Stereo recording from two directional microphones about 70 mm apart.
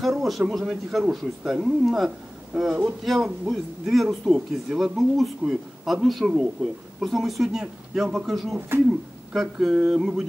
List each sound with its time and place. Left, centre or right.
0.0 s speech: centre
3.0 s speech: centre
8.5 s speech: right
9.3 s speech: centre